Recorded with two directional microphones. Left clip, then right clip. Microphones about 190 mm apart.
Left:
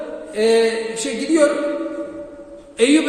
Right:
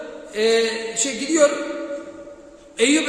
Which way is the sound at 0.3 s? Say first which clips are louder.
Left 3 dB; 10° right (ahead or behind).